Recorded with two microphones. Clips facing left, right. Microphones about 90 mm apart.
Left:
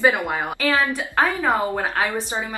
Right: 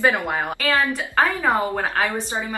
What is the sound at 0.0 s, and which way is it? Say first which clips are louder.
A woman's voice: left 1 dB; 10° left (ahead or behind).